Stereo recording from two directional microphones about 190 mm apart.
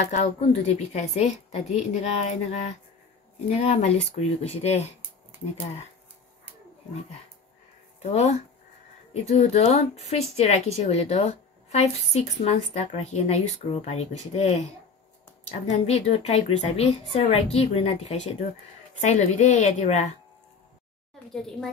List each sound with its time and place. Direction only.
0.1 s speech: 35° left (ahead or behind)
8.0 s speech: 35° left (ahead or behind)
15.9 s speech: 30° left (ahead or behind)
21.3 s a woman's voice: centre (ahead or behind)